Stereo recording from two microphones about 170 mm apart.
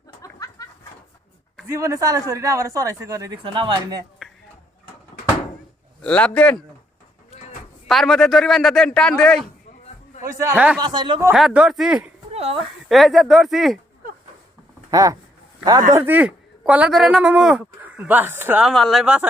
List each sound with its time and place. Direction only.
0.2 s a sound: 20° left (ahead or behind)
1.6 s speech: 20° right (ahead or behind)
4.2 s a sound: 5° right (ahead or behind)
6.0 s a man's voice: 5° left (ahead or behind)
7.9 s a man's voice: centre (ahead or behind)
10.2 s speech: 15° right (ahead or behind)
10.8 s speech: 25° right (ahead or behind)
11.3 s a man's voice: 5° right (ahead or behind)
12.3 s a sound: 35° right (ahead or behind)
12.5 s a man's voice: centre (ahead or behind)
14.8 s speech: 20° right (ahead or behind)
18.7 s a man's voice: centre (ahead or behind)